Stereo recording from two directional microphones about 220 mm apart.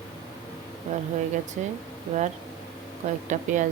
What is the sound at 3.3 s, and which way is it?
Speech, 35° right (ahead or behind).